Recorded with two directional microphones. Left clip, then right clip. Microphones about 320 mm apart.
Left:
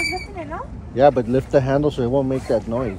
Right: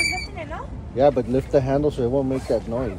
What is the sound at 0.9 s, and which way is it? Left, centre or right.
Speech, left.